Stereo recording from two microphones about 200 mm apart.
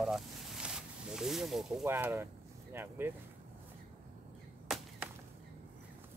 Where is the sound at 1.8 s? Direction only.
10° right (ahead or behind).